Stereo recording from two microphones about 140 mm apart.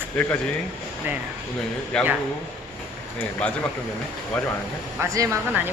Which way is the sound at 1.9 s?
5° left (ahead or behind).